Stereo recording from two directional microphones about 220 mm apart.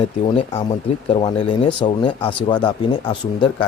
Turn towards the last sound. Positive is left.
turn(degrees=20)  # may be behind; listen again after turning